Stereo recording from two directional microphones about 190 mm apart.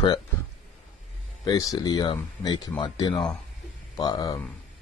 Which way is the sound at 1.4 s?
20° left (ahead or behind).